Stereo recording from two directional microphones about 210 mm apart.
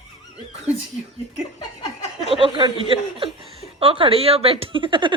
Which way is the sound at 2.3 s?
25° right (ahead or behind).